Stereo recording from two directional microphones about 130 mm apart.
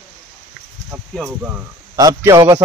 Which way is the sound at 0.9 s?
10° right (ahead or behind).